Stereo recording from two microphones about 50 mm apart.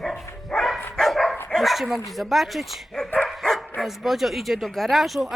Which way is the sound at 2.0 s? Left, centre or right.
Centre.